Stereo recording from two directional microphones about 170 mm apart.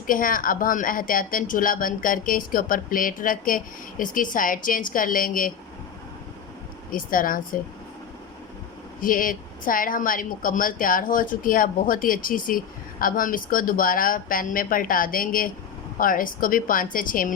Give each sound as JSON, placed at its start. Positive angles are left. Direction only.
{"t": 0.1, "sound": "speech", "side_deg": 55}
{"t": 6.9, "sound": "speech", "side_deg": 55}
{"t": 9.0, "sound": "speech", "side_deg": 55}